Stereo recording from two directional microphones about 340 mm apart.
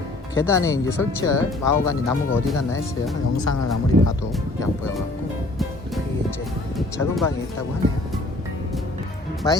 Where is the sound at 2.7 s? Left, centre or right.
Centre.